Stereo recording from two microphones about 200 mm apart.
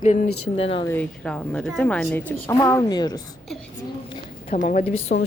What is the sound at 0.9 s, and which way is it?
A woman's voice, 5° left (ahead or behind).